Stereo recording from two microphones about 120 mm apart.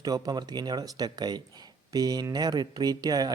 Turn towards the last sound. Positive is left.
turn(degrees=-30)  # may be behind; listen again after turning